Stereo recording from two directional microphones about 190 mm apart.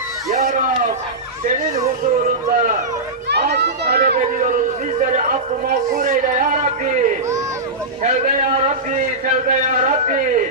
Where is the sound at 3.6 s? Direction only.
55° right (ahead or behind).